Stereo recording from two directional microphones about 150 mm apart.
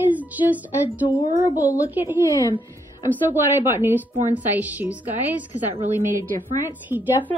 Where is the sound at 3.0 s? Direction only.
15° right (ahead or behind).